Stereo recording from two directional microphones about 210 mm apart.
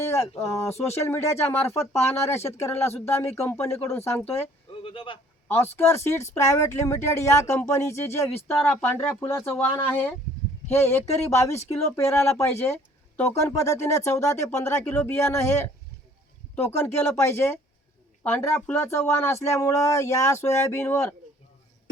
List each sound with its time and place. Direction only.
0.0 s speech: 10° left (ahead or behind)
4.7 s a sound: 25° left (ahead or behind)
5.7 s speech: 10° left (ahead or behind)